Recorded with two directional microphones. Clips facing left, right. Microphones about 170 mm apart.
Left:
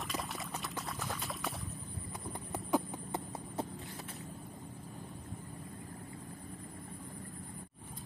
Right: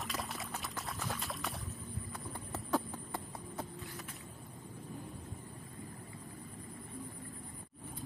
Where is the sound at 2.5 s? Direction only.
15° left (ahead or behind).